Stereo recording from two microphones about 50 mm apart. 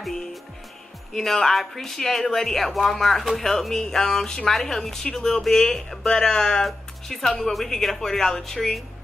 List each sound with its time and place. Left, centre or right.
0.0 s music: centre
1.1 s speech: centre